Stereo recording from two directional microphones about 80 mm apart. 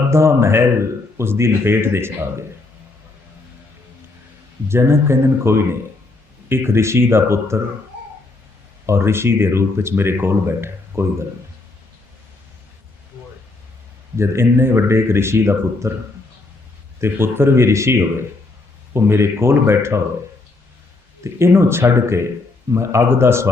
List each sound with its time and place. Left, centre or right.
0.1 s speech: right
4.7 s speech: right
8.9 s speech: right
14.2 s speech: right
17.0 s speech: right
21.3 s speech: right